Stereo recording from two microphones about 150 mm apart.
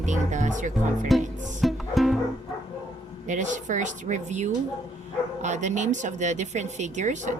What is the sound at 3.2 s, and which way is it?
Speech, 55° right (ahead or behind).